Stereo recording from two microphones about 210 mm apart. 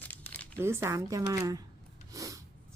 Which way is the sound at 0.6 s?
10° right (ahead or behind).